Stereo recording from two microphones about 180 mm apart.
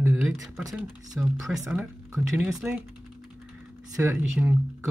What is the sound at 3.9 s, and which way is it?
Speech, 15° right (ahead or behind).